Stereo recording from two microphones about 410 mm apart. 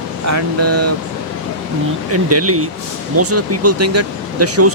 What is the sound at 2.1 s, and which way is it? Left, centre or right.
Speech, right.